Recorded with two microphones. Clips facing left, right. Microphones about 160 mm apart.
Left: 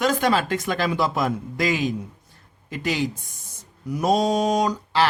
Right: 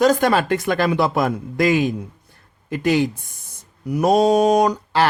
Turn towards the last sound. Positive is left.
turn(degrees=-55)  # may be behind; listen again after turning